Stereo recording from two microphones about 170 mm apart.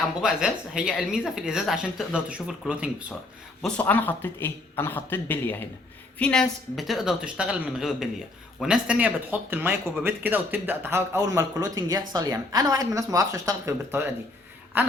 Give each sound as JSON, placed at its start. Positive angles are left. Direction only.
{"t": 0.2, "sound": "speech", "side_deg": -5}
{"t": 3.6, "sound": "a man's voice", "side_deg": 10}